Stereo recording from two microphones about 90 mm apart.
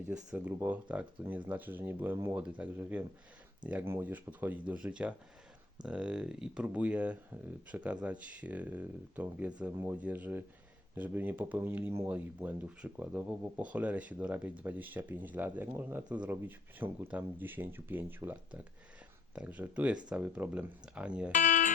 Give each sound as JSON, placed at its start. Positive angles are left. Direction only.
{"t": 0.1, "sound": "speech", "side_deg": -10}